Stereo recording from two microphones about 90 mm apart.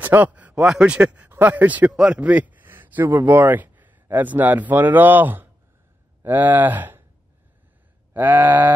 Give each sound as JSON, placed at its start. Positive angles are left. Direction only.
{"t": 0.0, "sound": "a man's voice", "side_deg": -20}
{"t": 8.1, "sound": "a man's voice", "side_deg": -20}